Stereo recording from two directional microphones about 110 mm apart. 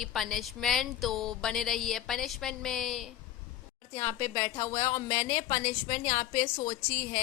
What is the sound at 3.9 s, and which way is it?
A woman's voice, 25° left (ahead or behind).